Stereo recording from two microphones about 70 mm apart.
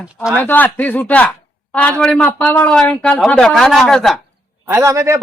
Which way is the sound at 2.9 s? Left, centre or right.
Centre.